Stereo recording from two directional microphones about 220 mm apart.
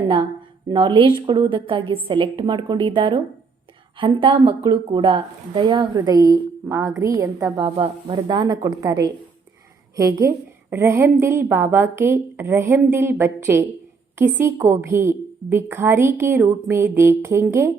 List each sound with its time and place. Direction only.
0.7 s a woman's voice: 20° right (ahead or behind)